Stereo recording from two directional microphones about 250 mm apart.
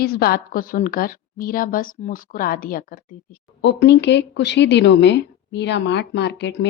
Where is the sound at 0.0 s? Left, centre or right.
Left.